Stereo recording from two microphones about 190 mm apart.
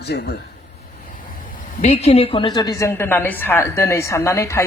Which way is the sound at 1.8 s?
35° left (ahead or behind).